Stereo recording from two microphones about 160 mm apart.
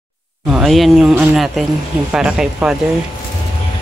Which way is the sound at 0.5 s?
Centre (ahead or behind).